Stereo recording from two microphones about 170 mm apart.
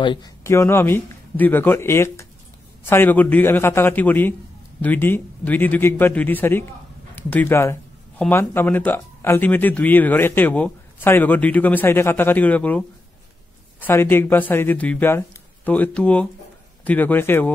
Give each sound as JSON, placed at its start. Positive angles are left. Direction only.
{"t": 0.0, "sound": "speech", "side_deg": 30}
{"t": 0.5, "sound": "speech", "side_deg": 15}